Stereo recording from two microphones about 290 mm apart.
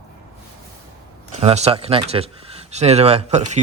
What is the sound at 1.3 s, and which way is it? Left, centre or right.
Speech, right.